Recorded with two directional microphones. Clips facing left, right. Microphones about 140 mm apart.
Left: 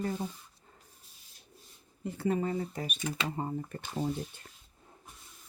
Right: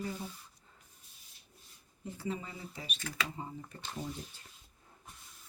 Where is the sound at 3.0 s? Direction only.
20° left (ahead or behind).